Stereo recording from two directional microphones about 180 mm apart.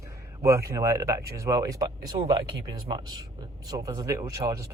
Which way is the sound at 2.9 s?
25° right (ahead or behind).